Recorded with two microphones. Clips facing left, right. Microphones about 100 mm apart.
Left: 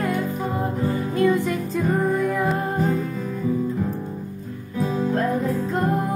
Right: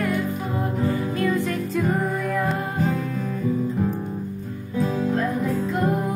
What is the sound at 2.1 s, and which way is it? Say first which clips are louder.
Music: left 2 dB; centre (ahead or behind).